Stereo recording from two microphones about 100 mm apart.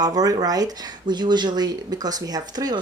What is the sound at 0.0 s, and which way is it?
Speech, 40° right (ahead or behind).